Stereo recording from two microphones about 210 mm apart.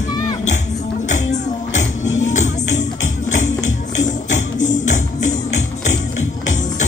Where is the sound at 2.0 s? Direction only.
65° left (ahead or behind).